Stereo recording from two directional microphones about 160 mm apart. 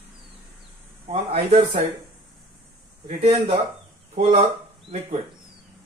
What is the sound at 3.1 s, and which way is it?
Speech, 35° right (ahead or behind).